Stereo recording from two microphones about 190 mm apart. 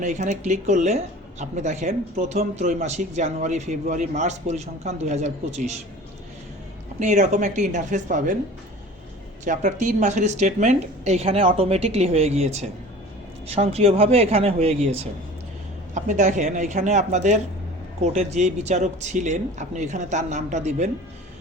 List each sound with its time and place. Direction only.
0.0 s speech: 40° right (ahead or behind)
7.0 s speech: 40° right (ahead or behind)
9.4 s speech: 40° right (ahead or behind)
16.0 s speech: 40° right (ahead or behind)